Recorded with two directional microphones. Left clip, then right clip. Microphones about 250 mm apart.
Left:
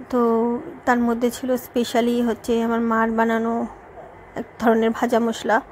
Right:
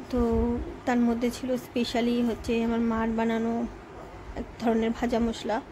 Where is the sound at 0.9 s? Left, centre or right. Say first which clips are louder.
Left 7 dB; centre.